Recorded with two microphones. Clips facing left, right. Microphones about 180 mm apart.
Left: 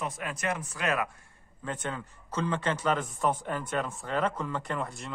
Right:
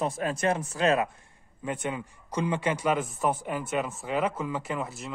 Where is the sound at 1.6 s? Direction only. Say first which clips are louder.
Right 3 dB; 10° right (ahead or behind).